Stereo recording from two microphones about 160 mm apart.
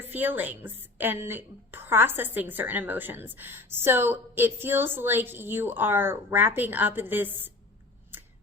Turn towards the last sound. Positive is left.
turn(degrees=-10)  # may be behind; listen again after turning